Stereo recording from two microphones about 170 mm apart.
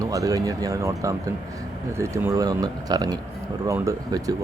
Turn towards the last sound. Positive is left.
turn(degrees=-20)  # may be behind; listen again after turning